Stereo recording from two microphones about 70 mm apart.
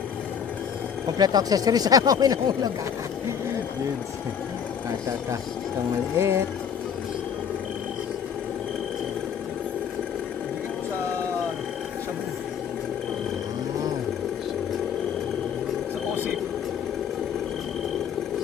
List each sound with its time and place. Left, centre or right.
1.2 s speech: right
6.1 s speech: right